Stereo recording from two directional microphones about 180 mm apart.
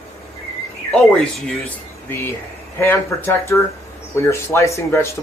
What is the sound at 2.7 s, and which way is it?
Speech, 10° left (ahead or behind).